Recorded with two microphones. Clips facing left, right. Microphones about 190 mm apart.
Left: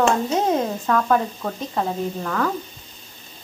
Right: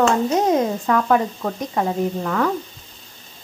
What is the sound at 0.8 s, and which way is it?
A woman's voice, 5° right (ahead or behind).